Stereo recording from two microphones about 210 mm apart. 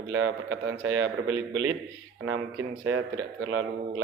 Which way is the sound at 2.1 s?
80° right.